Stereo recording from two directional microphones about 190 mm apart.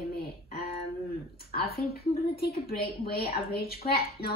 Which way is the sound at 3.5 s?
55° left (ahead or behind).